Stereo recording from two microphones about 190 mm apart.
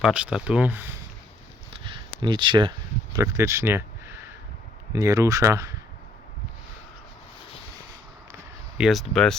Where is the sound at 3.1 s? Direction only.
15° right (ahead or behind).